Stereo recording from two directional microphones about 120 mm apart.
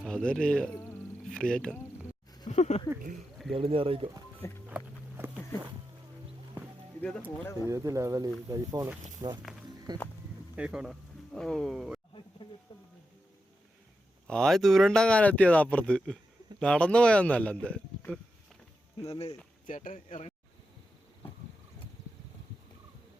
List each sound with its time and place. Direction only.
0.0 s speech: 5° left (ahead or behind)
2.5 s speech: 70° left (ahead or behind)
3.5 s speech: 50° right (ahead or behind)
4.7 s a sound: 15° right (ahead or behind)
7.4 s speech: 25° left (ahead or behind)
7.7 s speech: 25° right (ahead or behind)
10.5 s speech: 10° right (ahead or behind)
11.3 s speech: 5° left (ahead or behind)
14.3 s speech: 5° left (ahead or behind)
19.6 s speech: 90° left